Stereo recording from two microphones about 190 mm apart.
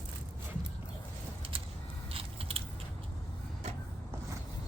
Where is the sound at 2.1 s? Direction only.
30° right (ahead or behind).